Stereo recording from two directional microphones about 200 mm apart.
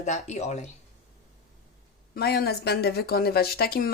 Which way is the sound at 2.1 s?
50° left (ahead or behind).